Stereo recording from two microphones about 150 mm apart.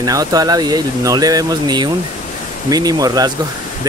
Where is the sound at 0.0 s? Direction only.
25° right (ahead or behind).